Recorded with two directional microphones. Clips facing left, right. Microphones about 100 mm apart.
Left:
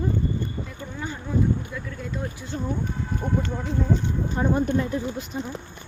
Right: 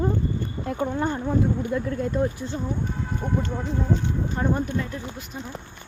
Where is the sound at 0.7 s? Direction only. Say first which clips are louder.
Right 9 dB; 55° right (ahead or behind).